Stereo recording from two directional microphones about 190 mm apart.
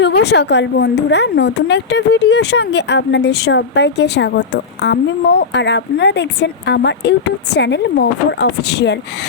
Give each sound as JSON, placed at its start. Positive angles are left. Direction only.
{"t": 0.0, "sound": "speech", "side_deg": 60}